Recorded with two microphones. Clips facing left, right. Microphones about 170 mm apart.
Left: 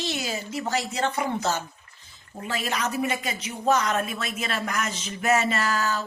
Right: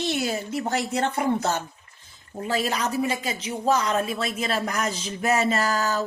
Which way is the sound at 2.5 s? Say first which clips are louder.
Right 3 dB; 35° right (ahead or behind).